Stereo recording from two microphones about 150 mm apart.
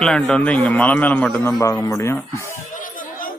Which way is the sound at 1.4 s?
20° left (ahead or behind).